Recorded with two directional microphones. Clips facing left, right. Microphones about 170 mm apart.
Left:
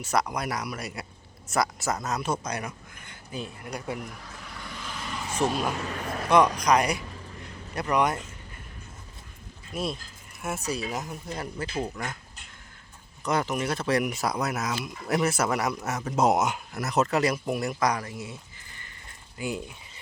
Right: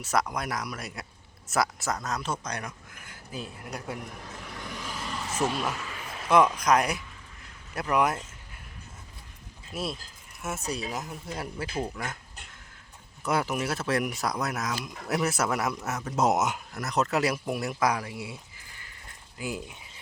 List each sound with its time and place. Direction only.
0.0 s speech: centre (ahead or behind)
4.2 s vehicle: 20° right (ahead or behind); by 5.4 s centre (ahead or behind)
5.8 s a sound: 45° left (ahead or behind)
6.2 s speech: 5° right (ahead or behind)
7.0 s a sound: 40° left (ahead or behind)
7.8 s speech: 5° right (ahead or behind)
9.7 s speech: 5° right (ahead or behind)
13.2 s speech: 5° right (ahead or behind)